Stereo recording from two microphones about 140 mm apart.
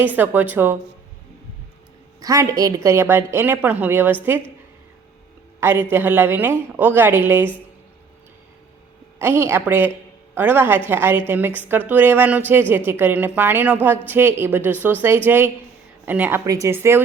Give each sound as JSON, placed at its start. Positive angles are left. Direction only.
{"t": 0.0, "sound": "a woman's voice", "side_deg": -10}
{"t": 2.2, "sound": "a woman's voice", "side_deg": -20}
{"t": 5.5, "sound": "a woman's voice", "side_deg": -15}
{"t": 9.1, "sound": "a woman's voice", "side_deg": -20}